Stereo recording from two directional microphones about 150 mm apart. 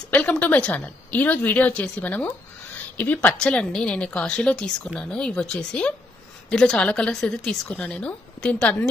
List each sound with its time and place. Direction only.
0.1 s a woman's voice: 10° left (ahead or behind)